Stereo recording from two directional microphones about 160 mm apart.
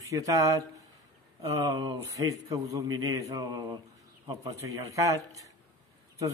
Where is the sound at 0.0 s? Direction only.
20° right (ahead or behind).